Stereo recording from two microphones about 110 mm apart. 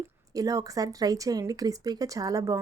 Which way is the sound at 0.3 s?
30° right (ahead or behind).